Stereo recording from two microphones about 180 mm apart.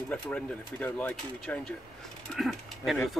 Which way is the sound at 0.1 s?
10° left (ahead or behind).